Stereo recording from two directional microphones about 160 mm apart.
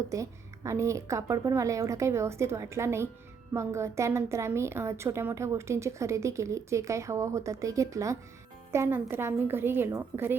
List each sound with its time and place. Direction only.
0.1 s a woman's voice: 20° right (ahead or behind)